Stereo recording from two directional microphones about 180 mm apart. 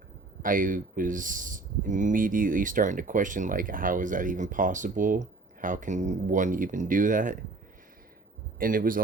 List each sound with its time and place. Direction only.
0.4 s speech: 50° right (ahead or behind)
8.5 s speech: 50° right (ahead or behind)